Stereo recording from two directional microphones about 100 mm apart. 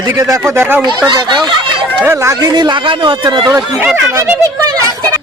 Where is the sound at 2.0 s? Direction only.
30° right (ahead or behind); by 3.5 s 50° right (ahead or behind).